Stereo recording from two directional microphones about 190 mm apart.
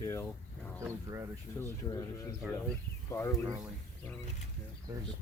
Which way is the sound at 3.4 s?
20° right (ahead or behind).